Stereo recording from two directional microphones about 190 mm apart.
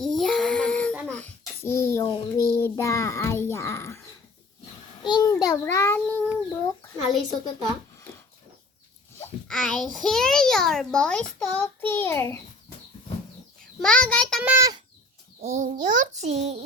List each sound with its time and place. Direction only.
0.0 s child singing: centre (ahead or behind)
1.1 s a sound: 10° left (ahead or behind)
2.6 s a child's voice: 15° left (ahead or behind)
9.5 s a child's voice: centre (ahead or behind)
13.8 s a child's voice: 5° left (ahead or behind)
14.4 s a child's voice: 15° right (ahead or behind)
15.4 s a child's voice: 35° right (ahead or behind)